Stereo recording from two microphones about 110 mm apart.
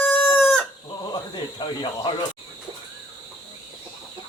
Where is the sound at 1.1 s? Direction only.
45° left (ahead or behind).